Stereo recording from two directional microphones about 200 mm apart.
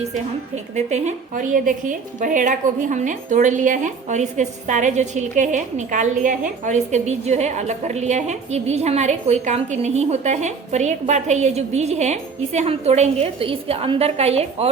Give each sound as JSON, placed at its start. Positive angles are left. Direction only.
{"t": 0.0, "sound": "a woman's voice", "side_deg": -35}